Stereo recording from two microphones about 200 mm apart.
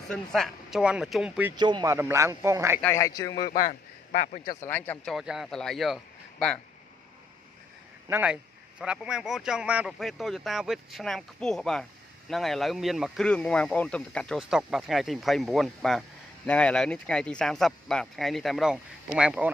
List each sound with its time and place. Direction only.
0.1 s speech: centre (ahead or behind)
1.6 s speech: 20° right (ahead or behind)
2.8 s speech: 15° left (ahead or behind)
4.6 s speech: 10° left (ahead or behind)
8.1 s speech: 5° right (ahead or behind)